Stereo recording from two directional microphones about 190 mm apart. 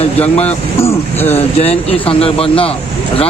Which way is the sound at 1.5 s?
30° left (ahead or behind).